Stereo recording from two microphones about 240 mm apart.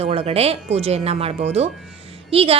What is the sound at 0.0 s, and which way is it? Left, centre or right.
Speech, right.